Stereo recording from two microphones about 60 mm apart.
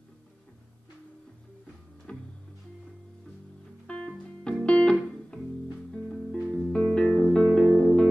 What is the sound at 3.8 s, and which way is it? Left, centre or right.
Music, centre.